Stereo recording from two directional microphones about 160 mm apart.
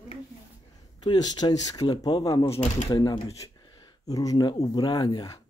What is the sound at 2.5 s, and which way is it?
Speech, 50° left (ahead or behind).